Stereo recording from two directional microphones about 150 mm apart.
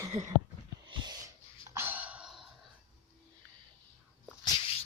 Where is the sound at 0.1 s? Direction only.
50° right (ahead or behind).